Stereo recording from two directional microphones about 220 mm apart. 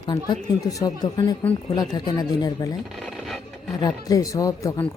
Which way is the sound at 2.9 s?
Centre (ahead or behind).